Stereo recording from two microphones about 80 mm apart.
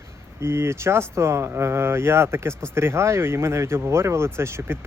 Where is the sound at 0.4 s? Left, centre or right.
Right.